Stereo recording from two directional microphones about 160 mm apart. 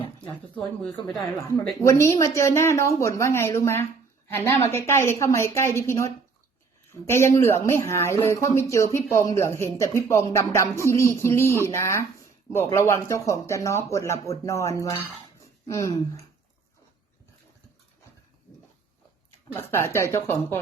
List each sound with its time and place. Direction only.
1.8 s speech: 20° left (ahead or behind)
19.5 s speech: 15° left (ahead or behind)